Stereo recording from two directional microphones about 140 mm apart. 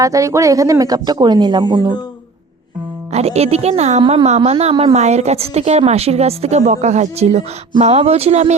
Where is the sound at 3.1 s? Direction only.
50° right (ahead or behind).